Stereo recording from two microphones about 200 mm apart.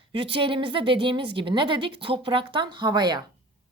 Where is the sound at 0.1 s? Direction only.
25° right (ahead or behind).